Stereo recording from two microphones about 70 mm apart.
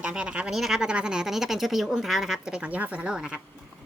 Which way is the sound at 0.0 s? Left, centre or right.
Centre.